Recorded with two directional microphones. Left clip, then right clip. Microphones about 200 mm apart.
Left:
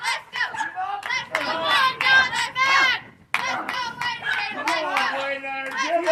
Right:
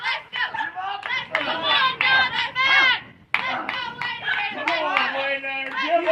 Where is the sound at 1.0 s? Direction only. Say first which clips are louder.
Right 2 dB; 15° left (ahead or behind).